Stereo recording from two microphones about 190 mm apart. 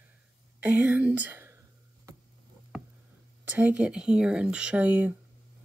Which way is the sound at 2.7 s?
Centre (ahead or behind).